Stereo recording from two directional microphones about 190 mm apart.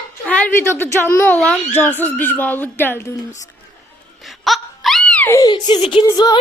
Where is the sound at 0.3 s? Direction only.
5° left (ahead or behind).